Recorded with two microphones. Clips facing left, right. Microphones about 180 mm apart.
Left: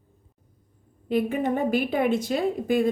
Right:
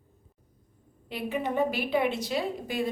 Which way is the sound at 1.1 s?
50° left (ahead or behind).